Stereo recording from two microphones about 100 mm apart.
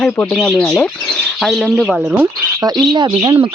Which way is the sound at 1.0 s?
10° left (ahead or behind).